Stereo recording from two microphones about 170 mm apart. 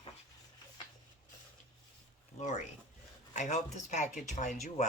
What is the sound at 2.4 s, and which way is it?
Speech, 45° left (ahead or behind).